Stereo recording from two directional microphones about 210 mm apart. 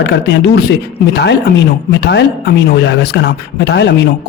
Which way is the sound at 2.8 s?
55° left (ahead or behind).